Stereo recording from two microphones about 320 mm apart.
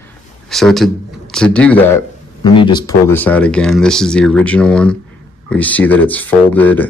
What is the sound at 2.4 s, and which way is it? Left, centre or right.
Speech, centre.